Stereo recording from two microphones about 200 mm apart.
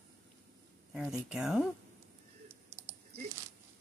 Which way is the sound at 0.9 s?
5° right (ahead or behind).